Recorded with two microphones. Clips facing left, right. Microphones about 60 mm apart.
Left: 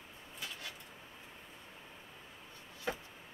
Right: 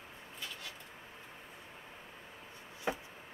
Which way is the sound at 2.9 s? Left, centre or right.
Right.